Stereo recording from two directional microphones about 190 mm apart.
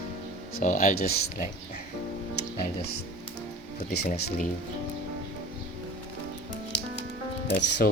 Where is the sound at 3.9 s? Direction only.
55° left (ahead or behind).